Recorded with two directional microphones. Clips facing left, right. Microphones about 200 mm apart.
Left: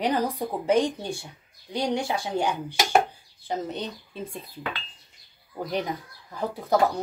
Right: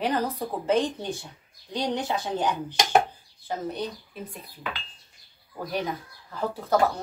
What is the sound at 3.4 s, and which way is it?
Speech, 25° left (ahead or behind).